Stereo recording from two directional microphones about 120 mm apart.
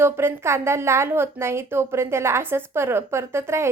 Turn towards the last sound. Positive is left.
turn(degrees=-20)  # may be behind; listen again after turning